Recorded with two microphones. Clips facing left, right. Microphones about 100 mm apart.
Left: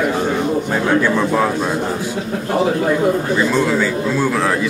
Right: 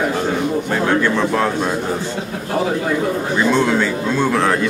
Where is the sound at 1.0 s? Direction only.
10° left (ahead or behind).